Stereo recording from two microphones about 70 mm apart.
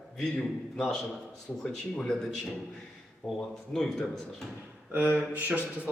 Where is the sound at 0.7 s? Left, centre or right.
Centre.